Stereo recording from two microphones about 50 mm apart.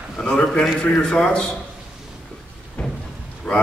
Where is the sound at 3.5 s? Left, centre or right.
Centre.